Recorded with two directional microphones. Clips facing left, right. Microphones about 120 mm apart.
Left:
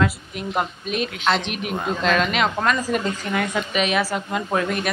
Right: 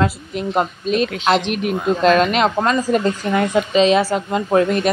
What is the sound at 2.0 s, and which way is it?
Speech, 40° right (ahead or behind).